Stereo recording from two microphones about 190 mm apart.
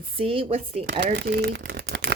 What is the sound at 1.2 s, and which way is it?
Speech, 60° right (ahead or behind).